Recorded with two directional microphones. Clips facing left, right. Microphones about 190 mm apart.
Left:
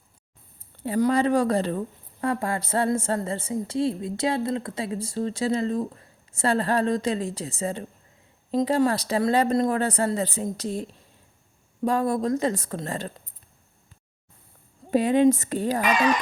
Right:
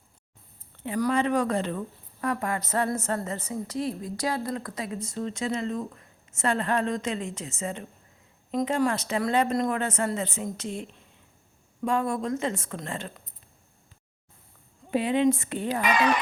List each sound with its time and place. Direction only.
0.9 s speech: 30° left (ahead or behind)
14.8 s speech: 40° left (ahead or behind)